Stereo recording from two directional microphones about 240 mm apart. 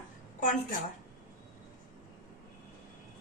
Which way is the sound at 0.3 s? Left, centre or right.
Left.